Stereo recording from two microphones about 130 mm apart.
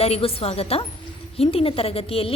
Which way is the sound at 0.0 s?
50° left (ahead or behind).